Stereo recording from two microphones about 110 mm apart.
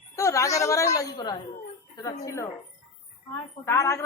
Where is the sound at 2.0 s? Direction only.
30° left (ahead or behind).